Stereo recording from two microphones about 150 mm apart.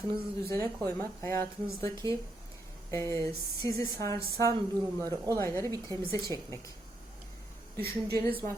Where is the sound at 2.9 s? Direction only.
20° left (ahead or behind).